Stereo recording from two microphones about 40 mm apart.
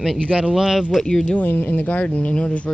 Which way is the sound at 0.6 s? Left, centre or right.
Centre.